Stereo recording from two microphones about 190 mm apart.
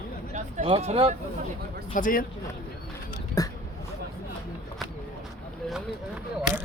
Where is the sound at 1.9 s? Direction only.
45° left (ahead or behind).